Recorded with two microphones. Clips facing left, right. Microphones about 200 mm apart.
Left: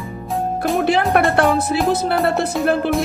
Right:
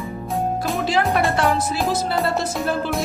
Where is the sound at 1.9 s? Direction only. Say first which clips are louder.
Left 3 dB; 60° left (ahead or behind).